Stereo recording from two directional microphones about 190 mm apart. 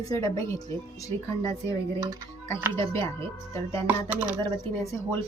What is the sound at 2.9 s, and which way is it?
Speech, 15° left (ahead or behind).